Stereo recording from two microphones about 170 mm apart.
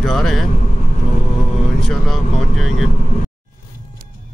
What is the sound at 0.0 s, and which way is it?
Speech, centre (ahead or behind).